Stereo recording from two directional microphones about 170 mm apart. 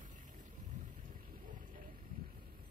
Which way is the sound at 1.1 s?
50° right (ahead or behind).